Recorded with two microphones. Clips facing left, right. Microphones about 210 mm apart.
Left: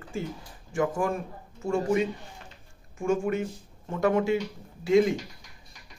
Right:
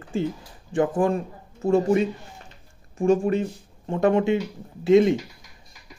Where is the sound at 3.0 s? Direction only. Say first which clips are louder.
Right 6 dB; 35° right (ahead or behind).